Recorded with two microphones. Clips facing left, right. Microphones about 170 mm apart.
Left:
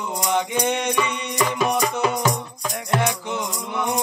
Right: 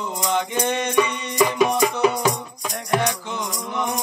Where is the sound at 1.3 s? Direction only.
10° right (ahead or behind).